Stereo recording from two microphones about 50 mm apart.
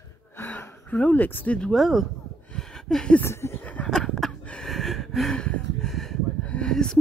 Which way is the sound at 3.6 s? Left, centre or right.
Left.